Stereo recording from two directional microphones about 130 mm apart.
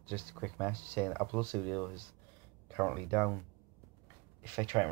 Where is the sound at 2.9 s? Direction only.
15° left (ahead or behind).